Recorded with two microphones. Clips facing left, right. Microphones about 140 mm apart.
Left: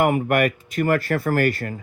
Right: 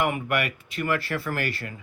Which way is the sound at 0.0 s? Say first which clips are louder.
Left 7 dB; 45° left (ahead or behind).